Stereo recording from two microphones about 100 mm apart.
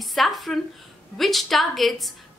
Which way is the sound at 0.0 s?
Centre (ahead or behind).